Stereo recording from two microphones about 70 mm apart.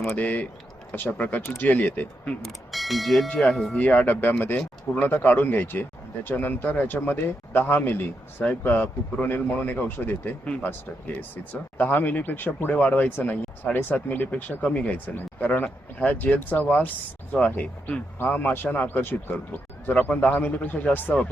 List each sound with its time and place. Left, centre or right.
0.2 s speech: left
2.4 s speech: centre
3.8 s speech: left